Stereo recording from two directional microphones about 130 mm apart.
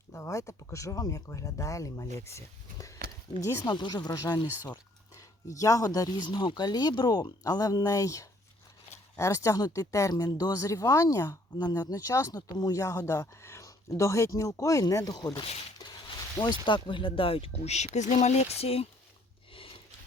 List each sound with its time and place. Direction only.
0.1 s speech: 20° left (ahead or behind)
15.8 s a sound: 30° left (ahead or behind)
16.6 s speech: 40° left (ahead or behind)